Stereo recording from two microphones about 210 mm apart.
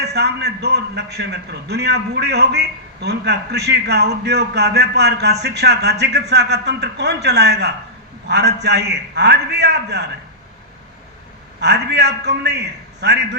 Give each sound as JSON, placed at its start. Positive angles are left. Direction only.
{"t": 0.0, "sound": "a man's voice", "side_deg": -55}
{"t": 11.6, "sound": "a man's voice", "side_deg": -55}